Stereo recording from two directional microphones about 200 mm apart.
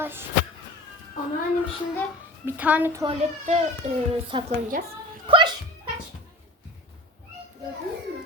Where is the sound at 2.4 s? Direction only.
5° right (ahead or behind).